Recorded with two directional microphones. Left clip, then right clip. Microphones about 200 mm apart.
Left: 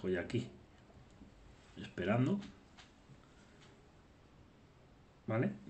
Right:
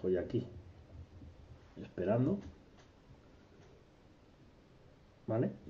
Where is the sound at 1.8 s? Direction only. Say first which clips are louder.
Right 2 dB; 15° left (ahead or behind).